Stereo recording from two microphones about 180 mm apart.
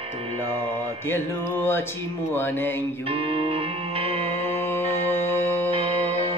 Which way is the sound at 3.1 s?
30° right (ahead or behind).